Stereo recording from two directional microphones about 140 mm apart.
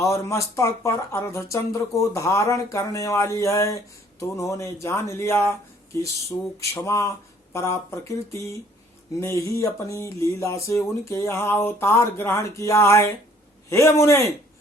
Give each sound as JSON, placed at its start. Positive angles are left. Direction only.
{"t": 0.1, "sound": "speech", "side_deg": 20}